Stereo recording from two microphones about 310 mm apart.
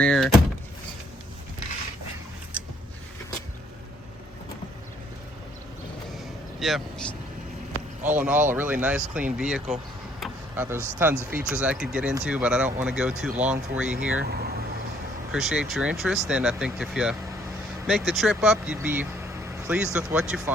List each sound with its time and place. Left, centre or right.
0.0 s vehicle: centre
6.6 s speech: centre
10.2 s a sound: centre
10.9 s speech: centre
14.2 s speech: right
15.3 s speech: centre